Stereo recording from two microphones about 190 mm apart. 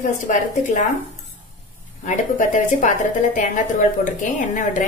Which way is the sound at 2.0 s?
40° left (ahead or behind).